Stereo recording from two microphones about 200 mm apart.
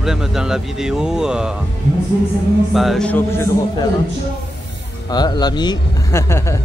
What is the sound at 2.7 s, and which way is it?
Speech, centre (ahead or behind).